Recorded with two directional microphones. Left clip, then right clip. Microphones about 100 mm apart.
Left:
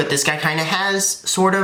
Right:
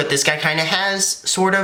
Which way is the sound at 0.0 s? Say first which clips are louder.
Right 1 dB; 15° right (ahead or behind).